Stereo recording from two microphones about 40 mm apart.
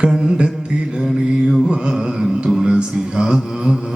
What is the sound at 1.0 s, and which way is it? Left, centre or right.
Mantra, centre.